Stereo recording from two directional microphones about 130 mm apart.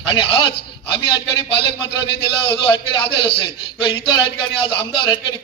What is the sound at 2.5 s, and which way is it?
A man's voice, 40° left (ahead or behind).